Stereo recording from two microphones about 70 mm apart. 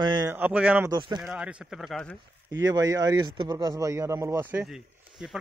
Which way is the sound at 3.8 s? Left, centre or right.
Right.